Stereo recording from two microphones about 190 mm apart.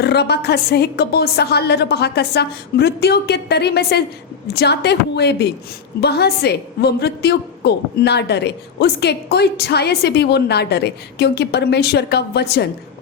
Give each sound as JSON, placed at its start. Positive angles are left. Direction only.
{"t": 0.0, "sound": "a woman's voice", "side_deg": 60}